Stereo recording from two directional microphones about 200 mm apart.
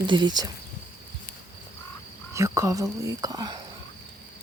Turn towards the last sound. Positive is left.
turn(degrees=-20)  # may be behind; listen again after turning